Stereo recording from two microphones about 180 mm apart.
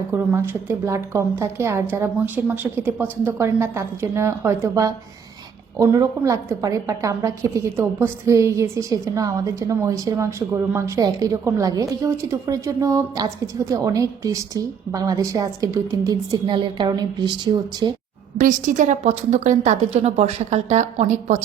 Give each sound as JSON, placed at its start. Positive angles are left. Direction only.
{"t": 0.1, "sound": "a woman's voice", "side_deg": -10}
{"t": 5.9, "sound": "a woman's voice", "side_deg": -20}
{"t": 18.3, "sound": "a woman's voice", "side_deg": -45}